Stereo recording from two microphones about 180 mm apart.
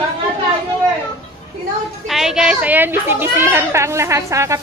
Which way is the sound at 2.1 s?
Centre (ahead or behind).